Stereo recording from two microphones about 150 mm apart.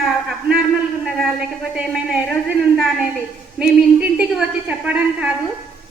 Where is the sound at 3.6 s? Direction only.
5° right (ahead or behind).